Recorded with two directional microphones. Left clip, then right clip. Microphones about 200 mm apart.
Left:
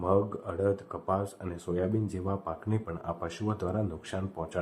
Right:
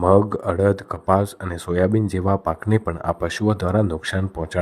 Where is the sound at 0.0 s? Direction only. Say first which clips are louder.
Right 12 dB; 50° right (ahead or behind).